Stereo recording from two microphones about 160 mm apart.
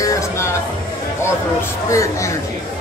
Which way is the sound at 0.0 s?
20° left (ahead or behind).